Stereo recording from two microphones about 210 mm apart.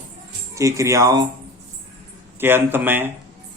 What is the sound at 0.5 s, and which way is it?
Speech, 15° right (ahead or behind).